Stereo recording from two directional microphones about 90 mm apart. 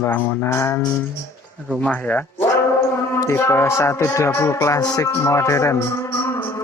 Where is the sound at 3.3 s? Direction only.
30° left (ahead or behind).